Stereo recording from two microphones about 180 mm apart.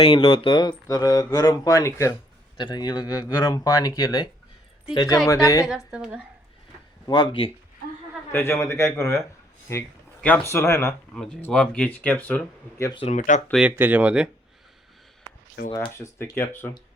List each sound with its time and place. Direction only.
0.0 s speech: 30° left (ahead or behind)
5.6 s a woman's voice: 5° right (ahead or behind)
7.1 s speech: 25° left (ahead or behind)
8.3 s speech: 10° left (ahead or behind)
11.1 s speech: 5° left (ahead or behind)
12.8 s speech: 25° left (ahead or behind)
13.1 s speech: 45° left (ahead or behind)
13.5 s speech: 5° right (ahead or behind)
15.9 s speech: 15° left (ahead or behind)